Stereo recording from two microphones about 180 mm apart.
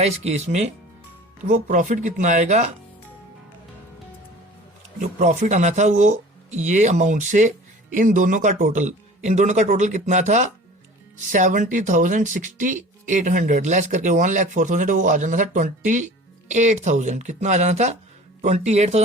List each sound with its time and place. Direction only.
0.0 s speech: 35° right (ahead or behind)
4.9 s speech: 40° right (ahead or behind)